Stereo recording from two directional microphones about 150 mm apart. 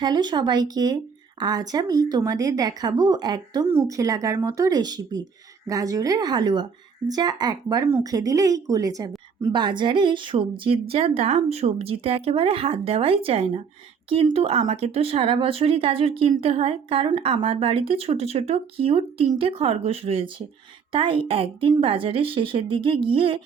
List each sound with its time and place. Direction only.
0.0 s a woman's voice: 30° right (ahead or behind)